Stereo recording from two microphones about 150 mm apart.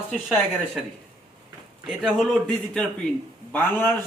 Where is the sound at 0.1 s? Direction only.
Centre (ahead or behind).